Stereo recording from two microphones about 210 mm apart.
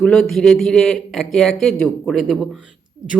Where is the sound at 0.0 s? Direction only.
5° left (ahead or behind).